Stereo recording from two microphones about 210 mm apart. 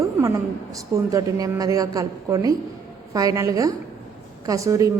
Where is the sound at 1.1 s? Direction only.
15° right (ahead or behind).